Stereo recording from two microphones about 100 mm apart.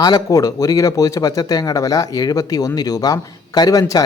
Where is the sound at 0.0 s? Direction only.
40° left (ahead or behind).